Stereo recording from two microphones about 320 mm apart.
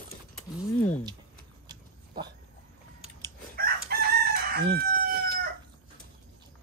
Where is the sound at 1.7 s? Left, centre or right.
Centre.